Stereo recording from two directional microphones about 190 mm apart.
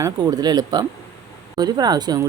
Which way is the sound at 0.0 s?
20° right (ahead or behind).